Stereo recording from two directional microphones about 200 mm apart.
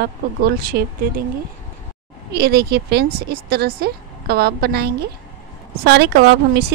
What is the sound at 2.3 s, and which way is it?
A woman's voice, 55° right (ahead or behind).